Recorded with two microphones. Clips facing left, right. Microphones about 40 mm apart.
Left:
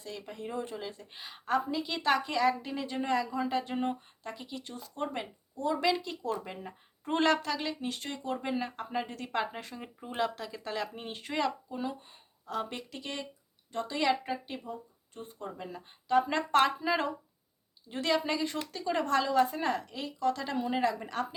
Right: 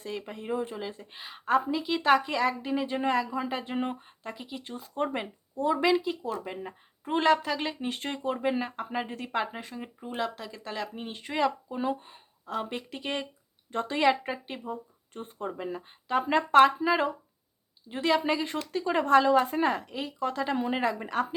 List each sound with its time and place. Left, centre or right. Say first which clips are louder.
0.0 s a woman's voice: right 4 dB; right; by 7.6 s centre
7.6 s a woman's voice: right 3 dB; right
7.9 s a woman's voice: right 4 dB; right
8.4 s a woman's voice: right 5 dB; centre
11.7 s speech: right 6 dB; right
12.9 s a woman's voice: right 6 dB; right
14.0 s a woman's voice: right 4 dB; right
15.1 s speech: right 6 dB; right
15.5 s a woman's voice: right 7 dB; centre